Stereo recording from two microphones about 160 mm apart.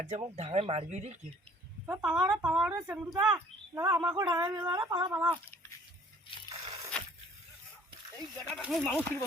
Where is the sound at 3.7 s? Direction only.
15° right (ahead or behind).